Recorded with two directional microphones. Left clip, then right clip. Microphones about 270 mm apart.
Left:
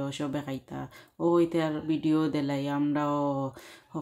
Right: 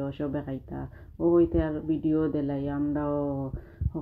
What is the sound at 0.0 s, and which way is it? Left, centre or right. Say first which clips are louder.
Speech: right 1 dB; centre.